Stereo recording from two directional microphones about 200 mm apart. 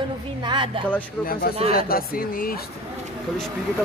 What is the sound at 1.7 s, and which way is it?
Speech, 45° left (ahead or behind).